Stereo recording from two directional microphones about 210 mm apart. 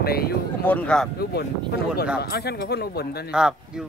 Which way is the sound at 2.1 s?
50° left (ahead or behind).